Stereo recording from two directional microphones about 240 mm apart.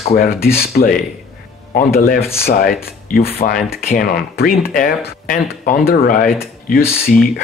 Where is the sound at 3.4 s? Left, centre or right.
Left.